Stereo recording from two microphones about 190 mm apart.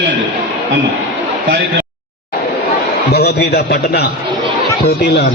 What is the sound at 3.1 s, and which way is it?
A man's voice, 60° left (ahead or behind).